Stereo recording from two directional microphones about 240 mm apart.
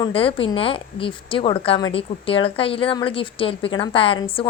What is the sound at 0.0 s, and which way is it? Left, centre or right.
A woman's voice, left.